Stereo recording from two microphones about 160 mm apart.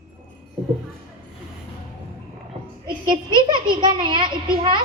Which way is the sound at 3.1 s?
30° right (ahead or behind).